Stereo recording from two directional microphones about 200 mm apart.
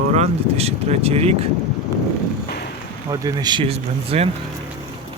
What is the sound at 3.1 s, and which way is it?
Speech, 20° right (ahead or behind).